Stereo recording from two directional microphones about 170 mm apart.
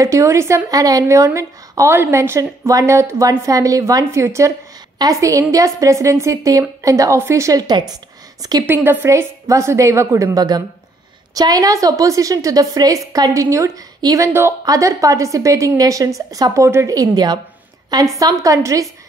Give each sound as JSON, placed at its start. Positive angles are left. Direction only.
{"t": 0.0, "sound": "a woman's voice", "side_deg": -15}